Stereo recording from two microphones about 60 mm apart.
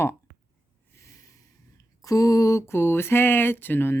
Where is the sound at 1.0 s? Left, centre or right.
Left.